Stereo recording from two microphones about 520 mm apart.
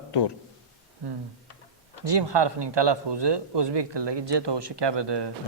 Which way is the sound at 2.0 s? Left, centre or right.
Right.